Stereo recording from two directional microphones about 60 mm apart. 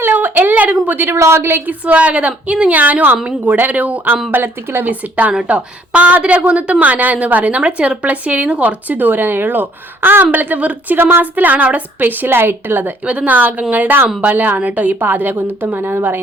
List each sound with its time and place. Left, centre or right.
0.0 s a sound: right
1.1 s a woman's voice: right
1.8 s a woman's voice: right
10.3 s a woman's voice: right
10.9 s a woman's voice: right
13.1 s a woman's voice: right